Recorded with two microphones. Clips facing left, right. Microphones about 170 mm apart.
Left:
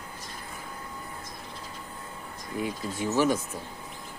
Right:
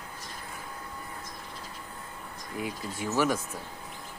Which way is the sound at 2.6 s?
25° left (ahead or behind).